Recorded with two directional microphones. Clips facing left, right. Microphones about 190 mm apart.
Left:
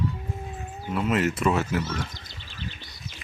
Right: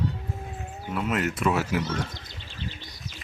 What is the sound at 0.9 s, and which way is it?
Speech, centre (ahead or behind).